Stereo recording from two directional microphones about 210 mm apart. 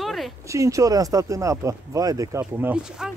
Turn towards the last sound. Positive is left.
turn(degrees=-5)  # may be behind; listen again after turning